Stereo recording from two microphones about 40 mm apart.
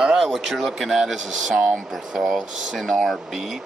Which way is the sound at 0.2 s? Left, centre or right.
Centre.